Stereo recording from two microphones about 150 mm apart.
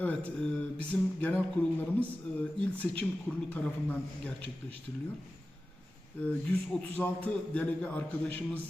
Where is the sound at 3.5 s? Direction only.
10° left (ahead or behind).